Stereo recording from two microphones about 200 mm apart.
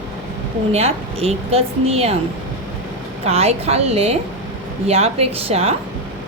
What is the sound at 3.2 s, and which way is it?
A woman's voice, 30° right (ahead or behind).